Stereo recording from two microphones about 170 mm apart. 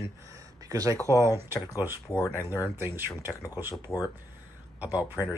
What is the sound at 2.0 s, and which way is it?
Speech, 20° left (ahead or behind).